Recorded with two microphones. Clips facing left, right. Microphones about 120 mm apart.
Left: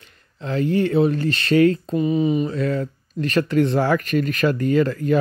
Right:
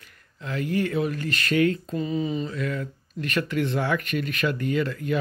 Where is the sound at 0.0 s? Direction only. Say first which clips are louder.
Left 6 dB; 30° left (ahead or behind).